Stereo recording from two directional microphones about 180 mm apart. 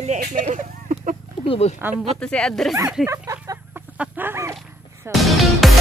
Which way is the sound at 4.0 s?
10° right (ahead or behind).